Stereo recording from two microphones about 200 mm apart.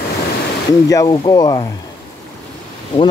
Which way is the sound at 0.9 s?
20° left (ahead or behind).